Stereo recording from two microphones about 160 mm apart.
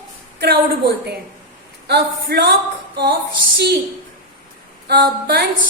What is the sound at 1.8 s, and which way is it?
Speech, 90° right.